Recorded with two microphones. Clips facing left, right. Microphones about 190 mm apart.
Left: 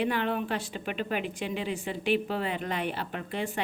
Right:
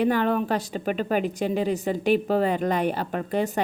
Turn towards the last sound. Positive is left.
turn(degrees=-40)  # may be behind; listen again after turning